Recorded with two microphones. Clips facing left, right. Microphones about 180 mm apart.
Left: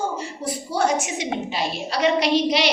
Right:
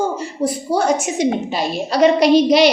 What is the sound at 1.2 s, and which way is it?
A woman's voice, 45° right (ahead or behind).